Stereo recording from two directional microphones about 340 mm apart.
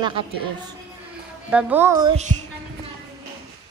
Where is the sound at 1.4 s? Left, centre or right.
Centre.